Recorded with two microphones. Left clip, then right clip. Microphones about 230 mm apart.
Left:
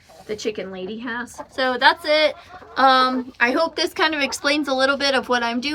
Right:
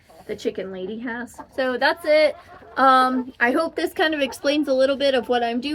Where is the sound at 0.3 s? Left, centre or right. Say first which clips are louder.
Left 1 dB; centre.